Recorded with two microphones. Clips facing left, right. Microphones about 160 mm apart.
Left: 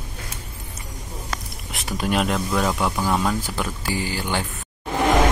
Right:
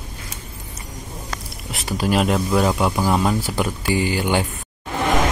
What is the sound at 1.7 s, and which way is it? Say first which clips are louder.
Speech: right 3 dB; centre (ahead or behind).